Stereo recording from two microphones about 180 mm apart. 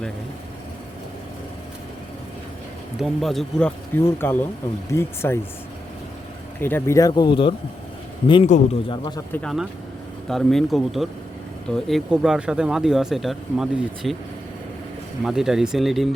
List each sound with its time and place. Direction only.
3.0 s speech: centre (ahead or behind)
3.9 s speech: 10° left (ahead or behind)
6.6 s speech: 10° left (ahead or behind)
7.1 s speech: 25° left (ahead or behind)
8.5 s a man's voice: 40° left (ahead or behind)
8.9 s speech: 25° left (ahead or behind)
9.3 s speech: 5° left (ahead or behind)
15.2 s speech: centre (ahead or behind)